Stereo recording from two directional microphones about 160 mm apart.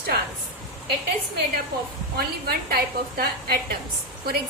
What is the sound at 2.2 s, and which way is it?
Speech, 75° right (ahead or behind).